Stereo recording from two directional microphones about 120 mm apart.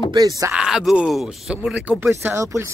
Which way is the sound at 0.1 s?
30° right (ahead or behind).